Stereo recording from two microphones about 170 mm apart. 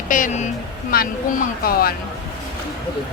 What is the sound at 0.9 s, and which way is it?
Speech, 60° left (ahead or behind).